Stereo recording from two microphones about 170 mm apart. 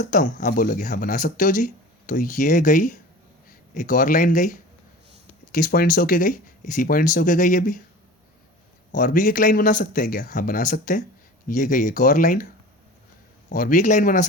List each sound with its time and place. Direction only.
0.0 s speech: 50° left (ahead or behind)
8.9 s speech: 50° left (ahead or behind)
13.5 s speech: 50° left (ahead or behind)